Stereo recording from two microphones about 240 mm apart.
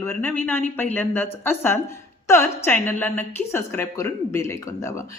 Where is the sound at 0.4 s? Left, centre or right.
Centre.